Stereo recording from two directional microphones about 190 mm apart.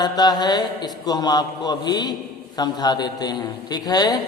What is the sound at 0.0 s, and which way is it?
A man's voice, 20° left (ahead or behind).